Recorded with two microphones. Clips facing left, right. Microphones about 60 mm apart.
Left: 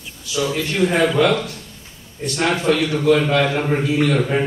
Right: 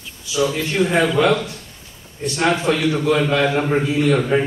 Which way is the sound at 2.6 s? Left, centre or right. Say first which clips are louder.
Left 1 dB; centre.